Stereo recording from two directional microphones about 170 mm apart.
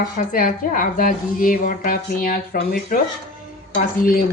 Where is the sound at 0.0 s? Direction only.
50° left (ahead or behind).